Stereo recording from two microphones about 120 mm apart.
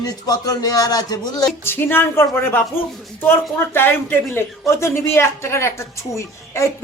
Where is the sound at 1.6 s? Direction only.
20° left (ahead or behind).